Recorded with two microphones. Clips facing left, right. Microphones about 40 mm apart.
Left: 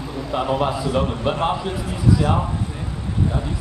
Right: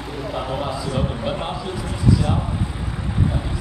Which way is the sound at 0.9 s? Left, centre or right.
Centre.